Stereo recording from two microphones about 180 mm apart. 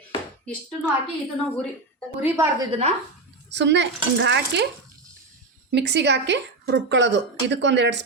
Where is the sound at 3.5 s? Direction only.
75° right (ahead or behind).